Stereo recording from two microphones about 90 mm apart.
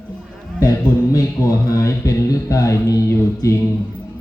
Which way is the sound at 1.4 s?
40° left (ahead or behind).